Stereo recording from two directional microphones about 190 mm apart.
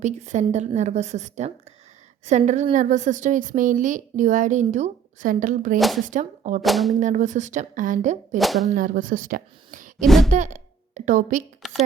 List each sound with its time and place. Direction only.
0.0 s a woman's voice: 40° right (ahead or behind)
5.7 s speech: centre (ahead or behind)
6.1 s a woman's voice: 40° right (ahead or behind)
6.6 s speech: centre (ahead or behind)
7.0 s a woman's voice: 40° right (ahead or behind)
8.4 s speech: centre (ahead or behind)
8.7 s speech: 45° right (ahead or behind)
10.0 s speech: centre (ahead or behind)
10.3 s speech: 40° right (ahead or behind)
11.6 s a sound: centre (ahead or behind)